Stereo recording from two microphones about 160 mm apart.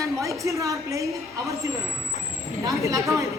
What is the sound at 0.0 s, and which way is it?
A woman's voice, 20° right (ahead or behind).